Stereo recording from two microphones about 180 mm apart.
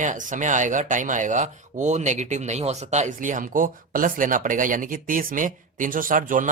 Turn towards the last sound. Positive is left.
turn(degrees=-50)  # may be behind; listen again after turning